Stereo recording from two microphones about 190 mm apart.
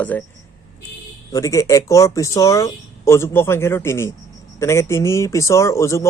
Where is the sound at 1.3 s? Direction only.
15° left (ahead or behind).